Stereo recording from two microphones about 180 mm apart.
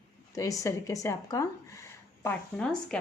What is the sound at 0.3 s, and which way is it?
Speech, 20° left (ahead or behind).